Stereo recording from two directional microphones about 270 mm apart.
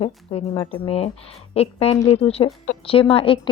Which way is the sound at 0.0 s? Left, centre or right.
Left.